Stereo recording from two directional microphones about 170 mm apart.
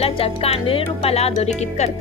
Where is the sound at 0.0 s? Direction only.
35° left (ahead or behind).